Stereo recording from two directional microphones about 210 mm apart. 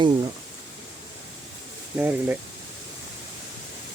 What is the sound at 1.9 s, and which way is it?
Speech, 10° right (ahead or behind).